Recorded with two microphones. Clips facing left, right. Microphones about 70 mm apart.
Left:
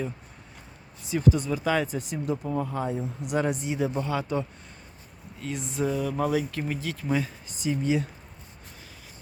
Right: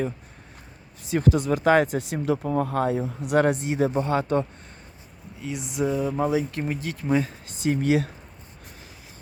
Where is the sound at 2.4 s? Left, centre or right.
Right.